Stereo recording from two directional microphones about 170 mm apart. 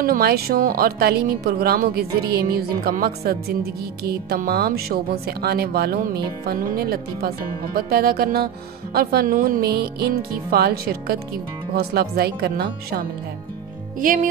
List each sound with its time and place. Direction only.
0.0 s speech: 65° right (ahead or behind)
13.9 s speech: 55° right (ahead or behind)